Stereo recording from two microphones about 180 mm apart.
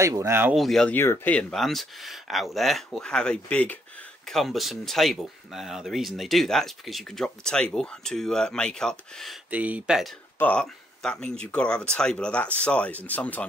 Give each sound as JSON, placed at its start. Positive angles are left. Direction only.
{"t": 0.0, "sound": "speech", "side_deg": -15}
{"t": 0.6, "sound": "speech", "side_deg": 0}
{"t": 10.4, "sound": "speech", "side_deg": 5}